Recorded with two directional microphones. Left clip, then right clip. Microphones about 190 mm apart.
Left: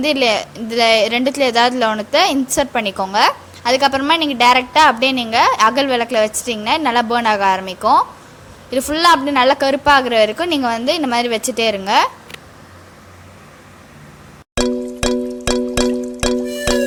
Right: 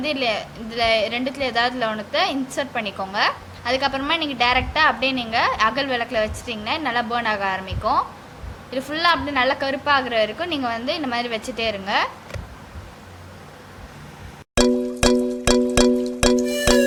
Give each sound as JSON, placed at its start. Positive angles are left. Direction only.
{"t": 0.0, "sound": "a woman's voice", "side_deg": 50}
{"t": 14.5, "sound": "music", "side_deg": 0}